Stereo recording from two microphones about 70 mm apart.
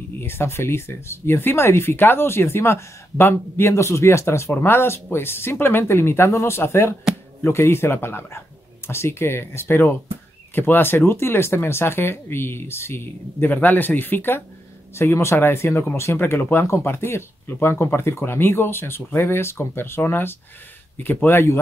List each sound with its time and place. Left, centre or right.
0.2 s speech: left